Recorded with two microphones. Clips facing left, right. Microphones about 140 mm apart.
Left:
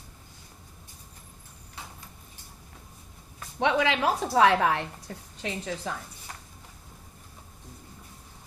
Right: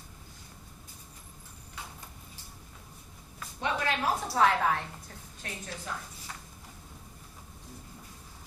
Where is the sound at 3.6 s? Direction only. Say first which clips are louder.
Left 6 dB; 90° left.